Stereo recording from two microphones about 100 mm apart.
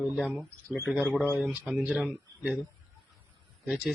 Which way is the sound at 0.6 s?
20° left (ahead or behind).